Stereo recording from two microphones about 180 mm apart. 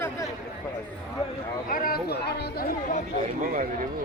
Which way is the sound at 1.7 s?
55° left (ahead or behind).